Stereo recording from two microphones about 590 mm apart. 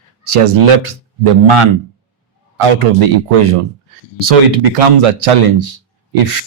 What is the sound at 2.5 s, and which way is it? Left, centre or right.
Speech, right.